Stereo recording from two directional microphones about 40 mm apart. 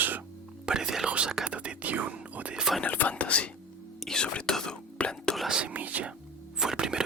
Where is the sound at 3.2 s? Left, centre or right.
Left.